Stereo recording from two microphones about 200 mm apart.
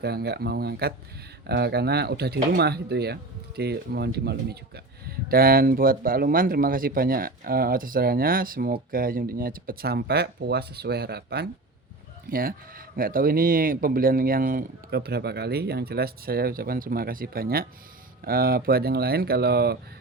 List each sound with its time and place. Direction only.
0.0 s speech: 55° right (ahead or behind)